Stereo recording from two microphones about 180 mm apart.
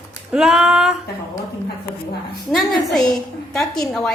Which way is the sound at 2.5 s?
Centre (ahead or behind).